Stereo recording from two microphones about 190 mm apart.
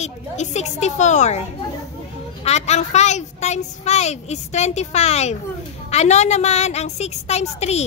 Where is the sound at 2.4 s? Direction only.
35° left (ahead or behind).